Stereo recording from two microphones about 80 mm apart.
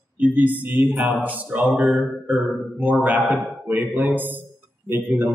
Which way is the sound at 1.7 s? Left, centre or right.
Centre.